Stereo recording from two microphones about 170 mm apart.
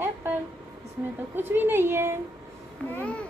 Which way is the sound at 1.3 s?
10° right (ahead or behind).